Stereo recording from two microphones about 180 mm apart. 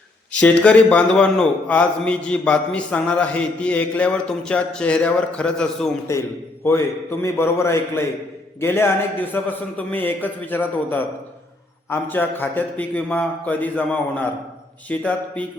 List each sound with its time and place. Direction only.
0.3 s a man's voice: 5° left (ahead or behind)
6.1 s a man's voice: 15° left (ahead or behind)